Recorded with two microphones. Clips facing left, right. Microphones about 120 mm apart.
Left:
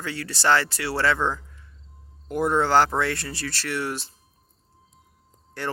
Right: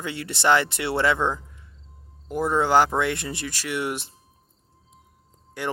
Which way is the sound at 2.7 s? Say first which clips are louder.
Right 1 dB; 15° right (ahead or behind).